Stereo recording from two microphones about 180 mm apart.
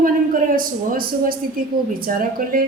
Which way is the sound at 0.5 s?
50° right (ahead or behind).